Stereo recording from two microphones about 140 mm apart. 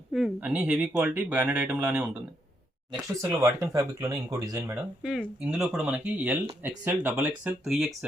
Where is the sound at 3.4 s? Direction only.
25° right (ahead or behind).